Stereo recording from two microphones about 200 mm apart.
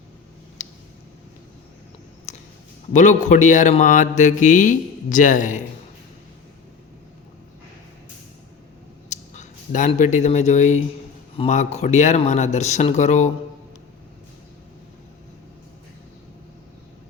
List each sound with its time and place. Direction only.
0.6 s a sound: 35° left (ahead or behind)
2.3 s clicking: 35° left (ahead or behind)
2.9 s speech: 40° left (ahead or behind)
9.0 s speech: 35° left (ahead or behind)